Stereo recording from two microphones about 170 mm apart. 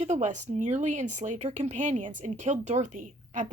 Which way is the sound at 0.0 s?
40° right (ahead or behind).